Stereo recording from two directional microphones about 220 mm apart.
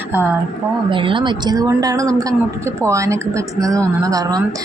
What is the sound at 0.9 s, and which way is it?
A woman's voice, 25° right (ahead or behind).